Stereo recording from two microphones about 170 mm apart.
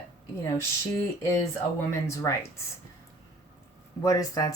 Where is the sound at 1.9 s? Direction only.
15° left (ahead or behind).